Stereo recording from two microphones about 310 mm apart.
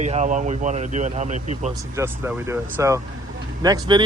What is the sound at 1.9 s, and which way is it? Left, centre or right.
Speech, centre.